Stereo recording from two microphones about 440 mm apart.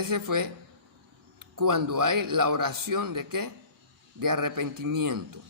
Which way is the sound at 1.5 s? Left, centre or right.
Right.